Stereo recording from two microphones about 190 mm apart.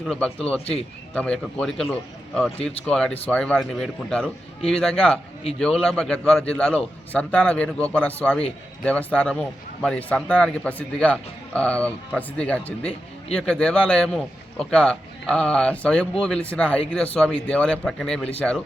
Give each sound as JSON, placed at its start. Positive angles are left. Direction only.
{"t": 0.0, "sound": "speech", "side_deg": 5}
{"t": 0.6, "sound": "speech", "side_deg": 30}
{"t": 1.1, "sound": "speech", "side_deg": 5}